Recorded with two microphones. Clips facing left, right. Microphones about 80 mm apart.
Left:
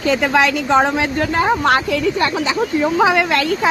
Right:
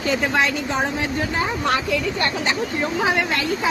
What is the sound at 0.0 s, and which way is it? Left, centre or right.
A woman's voice, left.